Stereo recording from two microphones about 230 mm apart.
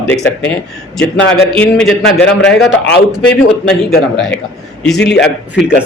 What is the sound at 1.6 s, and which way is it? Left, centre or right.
Speech, centre.